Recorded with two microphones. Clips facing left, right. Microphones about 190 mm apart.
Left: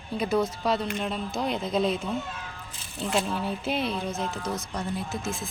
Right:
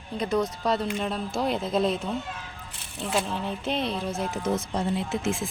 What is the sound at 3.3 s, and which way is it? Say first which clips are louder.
Speech: even; 5° left (ahead or behind).